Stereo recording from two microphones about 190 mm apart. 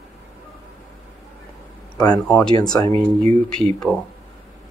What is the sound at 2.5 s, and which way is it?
Speech, 20° left (ahead or behind).